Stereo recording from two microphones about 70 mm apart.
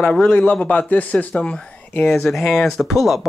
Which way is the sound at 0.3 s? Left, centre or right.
Left.